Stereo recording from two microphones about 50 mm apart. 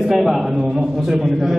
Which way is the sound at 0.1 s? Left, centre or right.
Centre.